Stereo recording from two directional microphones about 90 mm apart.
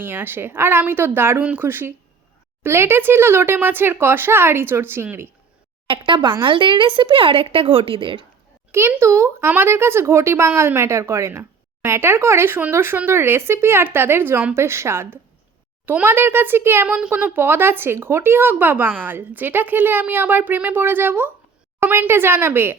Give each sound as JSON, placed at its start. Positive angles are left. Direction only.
{"t": 0.0, "sound": "speech", "side_deg": -25}
{"t": 6.1, "sound": "a woman's voice", "side_deg": -65}
{"t": 9.0, "sound": "speech", "side_deg": -30}